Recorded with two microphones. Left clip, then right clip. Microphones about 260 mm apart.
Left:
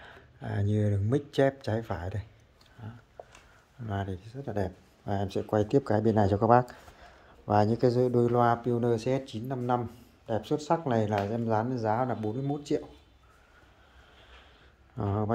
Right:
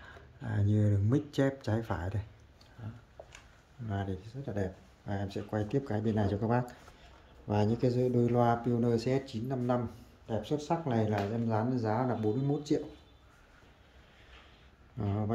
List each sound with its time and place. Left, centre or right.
0.0 s speech: centre
2.8 s a sound: centre
3.8 s speech: centre
15.0 s speech: centre